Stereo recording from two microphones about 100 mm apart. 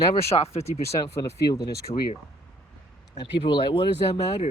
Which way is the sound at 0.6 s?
40° left (ahead or behind).